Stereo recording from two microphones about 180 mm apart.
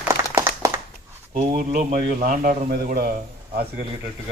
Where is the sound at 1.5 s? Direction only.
45° right (ahead or behind).